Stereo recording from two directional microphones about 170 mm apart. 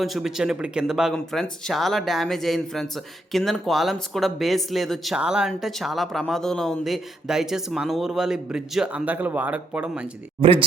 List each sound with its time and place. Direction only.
0.0 s speech: centre (ahead or behind)
10.4 s speech: 30° right (ahead or behind)